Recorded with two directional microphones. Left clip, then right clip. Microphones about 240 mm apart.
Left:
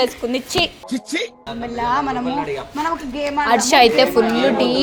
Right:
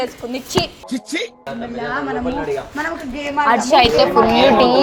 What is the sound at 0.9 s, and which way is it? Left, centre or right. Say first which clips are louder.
Speech: even; centre.